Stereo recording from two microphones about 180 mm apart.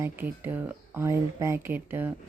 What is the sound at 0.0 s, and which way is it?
Speech, 10° right (ahead or behind).